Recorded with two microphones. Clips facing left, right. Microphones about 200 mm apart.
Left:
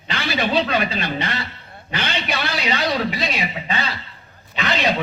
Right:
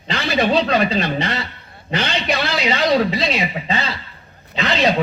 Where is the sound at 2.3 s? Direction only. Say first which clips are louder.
Right 4 dB; 30° right (ahead or behind).